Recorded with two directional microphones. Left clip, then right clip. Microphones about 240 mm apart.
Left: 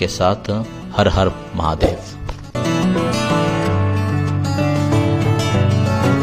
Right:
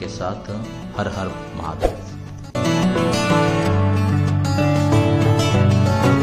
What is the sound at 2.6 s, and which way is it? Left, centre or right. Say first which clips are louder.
Music: left 1 dB; centre.